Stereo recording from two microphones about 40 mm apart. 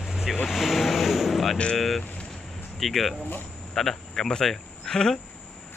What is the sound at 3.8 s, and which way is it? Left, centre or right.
Speech, centre.